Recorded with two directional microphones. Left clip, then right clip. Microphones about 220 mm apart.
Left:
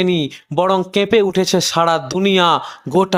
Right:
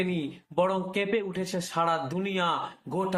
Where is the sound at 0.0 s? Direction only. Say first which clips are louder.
Left 14 dB; 50° left (ahead or behind).